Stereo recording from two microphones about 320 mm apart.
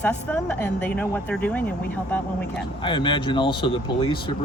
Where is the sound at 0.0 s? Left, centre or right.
Centre.